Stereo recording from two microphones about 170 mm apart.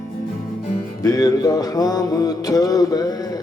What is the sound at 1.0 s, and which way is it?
Music, 20° left (ahead or behind).